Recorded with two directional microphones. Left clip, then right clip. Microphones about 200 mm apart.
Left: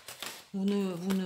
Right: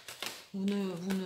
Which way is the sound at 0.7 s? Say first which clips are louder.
Left 3 dB; 40° left (ahead or behind).